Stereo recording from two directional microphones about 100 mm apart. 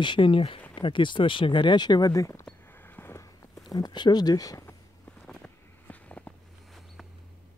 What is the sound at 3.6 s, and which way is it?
Speech, 45° left (ahead or behind).